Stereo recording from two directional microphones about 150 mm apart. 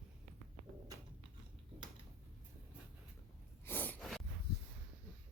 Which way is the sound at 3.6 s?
10° left (ahead or behind).